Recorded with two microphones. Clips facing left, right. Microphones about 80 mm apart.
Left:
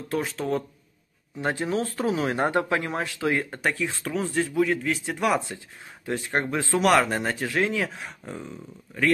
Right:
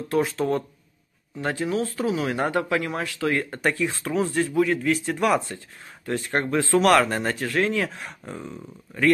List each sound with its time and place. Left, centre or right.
0.1 s speech: centre
1.4 s speech: left
3.4 s speech: centre